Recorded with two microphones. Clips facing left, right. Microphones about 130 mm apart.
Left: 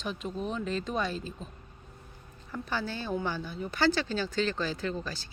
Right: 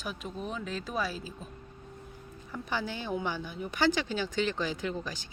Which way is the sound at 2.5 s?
15° right (ahead or behind).